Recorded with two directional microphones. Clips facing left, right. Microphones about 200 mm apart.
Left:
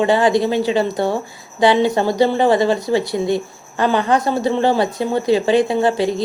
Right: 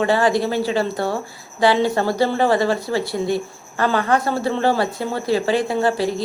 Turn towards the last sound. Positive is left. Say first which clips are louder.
# left 3 dB
turn(degrees=20)  # may be behind; listen again after turning